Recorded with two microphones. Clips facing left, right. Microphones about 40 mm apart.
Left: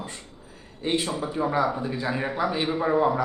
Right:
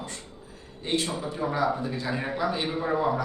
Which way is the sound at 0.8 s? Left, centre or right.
Centre.